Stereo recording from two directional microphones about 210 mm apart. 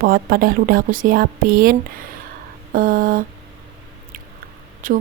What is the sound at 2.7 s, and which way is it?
Speech, 40° right (ahead or behind).